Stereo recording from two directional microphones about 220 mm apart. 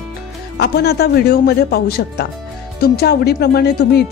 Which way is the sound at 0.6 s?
50° left (ahead or behind).